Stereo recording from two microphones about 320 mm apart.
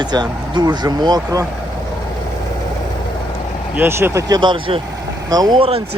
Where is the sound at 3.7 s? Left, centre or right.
Centre.